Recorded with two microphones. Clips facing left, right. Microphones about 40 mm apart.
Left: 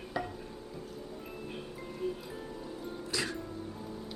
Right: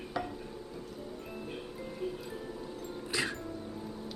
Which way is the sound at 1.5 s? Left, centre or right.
Centre.